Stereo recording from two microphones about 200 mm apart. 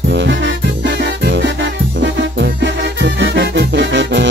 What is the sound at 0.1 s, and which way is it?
Music, 65° right (ahead or behind).